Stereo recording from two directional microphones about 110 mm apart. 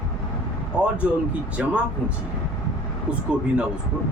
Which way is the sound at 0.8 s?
10° right (ahead or behind).